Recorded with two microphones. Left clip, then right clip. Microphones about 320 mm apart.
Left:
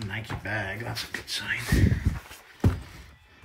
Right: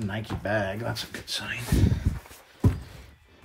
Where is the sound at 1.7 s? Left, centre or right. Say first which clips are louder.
Left 1 dB; right.